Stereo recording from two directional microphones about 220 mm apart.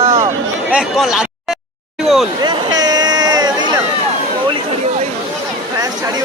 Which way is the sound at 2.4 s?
20° right (ahead or behind).